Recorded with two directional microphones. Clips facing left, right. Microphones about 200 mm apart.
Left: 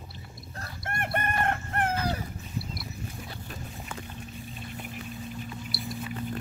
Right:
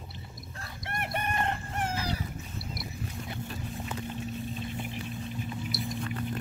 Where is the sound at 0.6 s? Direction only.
50° left (ahead or behind).